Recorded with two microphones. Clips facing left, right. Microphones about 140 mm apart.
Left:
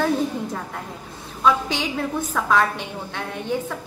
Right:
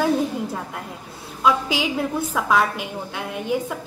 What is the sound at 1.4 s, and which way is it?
A woman's voice, 5° right (ahead or behind).